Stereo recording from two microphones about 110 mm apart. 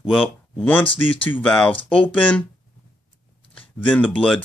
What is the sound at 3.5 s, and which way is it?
Speech, 15° left (ahead or behind).